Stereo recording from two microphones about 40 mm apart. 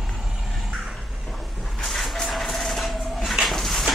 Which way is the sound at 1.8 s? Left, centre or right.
Centre.